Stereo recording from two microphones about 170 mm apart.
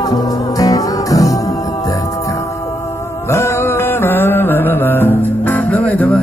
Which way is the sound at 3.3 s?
15° left (ahead or behind).